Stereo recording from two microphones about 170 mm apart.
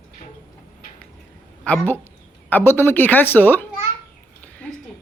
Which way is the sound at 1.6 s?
10° left (ahead or behind).